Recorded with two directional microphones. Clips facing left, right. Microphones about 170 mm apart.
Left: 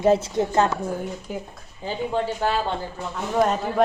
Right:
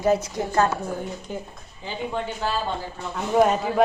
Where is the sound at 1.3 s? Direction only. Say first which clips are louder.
Even; 10° left (ahead or behind).